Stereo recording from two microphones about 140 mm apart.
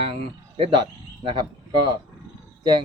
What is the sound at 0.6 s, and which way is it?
Speech, 35° right (ahead or behind).